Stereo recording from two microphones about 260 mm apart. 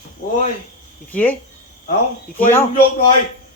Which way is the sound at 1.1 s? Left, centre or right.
Centre.